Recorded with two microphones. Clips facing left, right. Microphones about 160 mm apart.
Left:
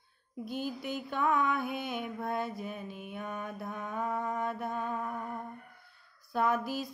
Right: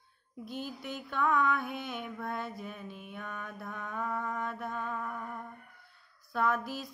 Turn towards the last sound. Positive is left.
turn(degrees=5)  # may be behind; listen again after turning